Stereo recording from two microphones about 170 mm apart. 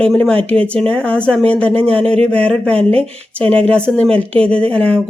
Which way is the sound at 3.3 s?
5° left (ahead or behind).